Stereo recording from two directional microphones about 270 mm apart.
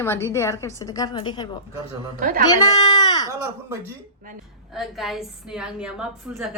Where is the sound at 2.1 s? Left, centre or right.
Right.